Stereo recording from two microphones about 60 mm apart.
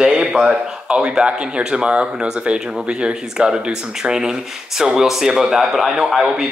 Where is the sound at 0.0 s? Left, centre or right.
Centre.